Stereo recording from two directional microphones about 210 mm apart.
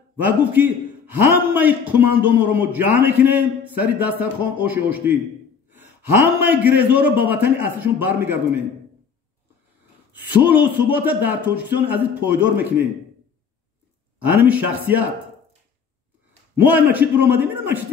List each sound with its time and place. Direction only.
0.2 s a man's voice: 10° right (ahead or behind)
6.4 s a man's voice: 10° right (ahead or behind)
10.4 s a man's voice: 10° right (ahead or behind)
14.2 s a man's voice: 10° right (ahead or behind)
16.5 s a man's voice: 10° right (ahead or behind)